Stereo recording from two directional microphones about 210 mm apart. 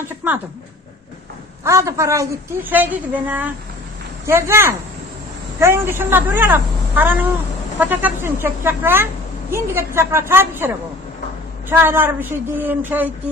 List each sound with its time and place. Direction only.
1.6 s a woman's voice: 15° right (ahead or behind)
11.7 s a woman's voice: 10° right (ahead or behind)